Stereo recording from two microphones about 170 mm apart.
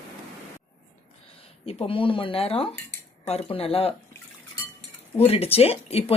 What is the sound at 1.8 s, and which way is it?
Speech, 30° left (ahead or behind).